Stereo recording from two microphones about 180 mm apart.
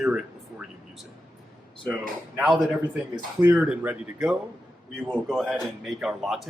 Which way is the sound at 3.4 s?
10° right (ahead or behind).